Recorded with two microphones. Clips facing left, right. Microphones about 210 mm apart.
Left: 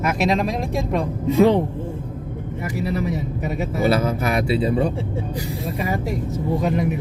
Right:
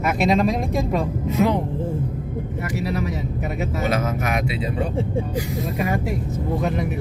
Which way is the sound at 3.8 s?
35° left (ahead or behind).